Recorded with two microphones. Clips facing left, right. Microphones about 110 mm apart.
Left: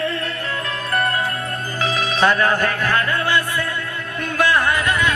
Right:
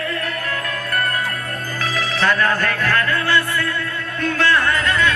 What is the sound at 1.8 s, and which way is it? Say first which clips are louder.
Music: left 2 dB; 20° left (ahead or behind).